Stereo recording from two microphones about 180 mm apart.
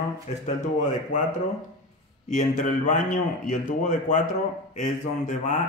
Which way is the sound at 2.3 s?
45° left (ahead or behind).